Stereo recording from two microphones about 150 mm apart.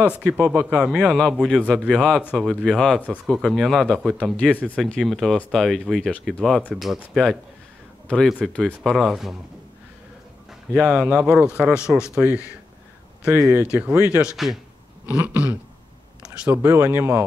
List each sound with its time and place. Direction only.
0.2 s speech: 5° right (ahead or behind)
8.1 s speech: centre (ahead or behind)
10.7 s speech: 5° right (ahead or behind)
13.2 s speech: 5° right (ahead or behind)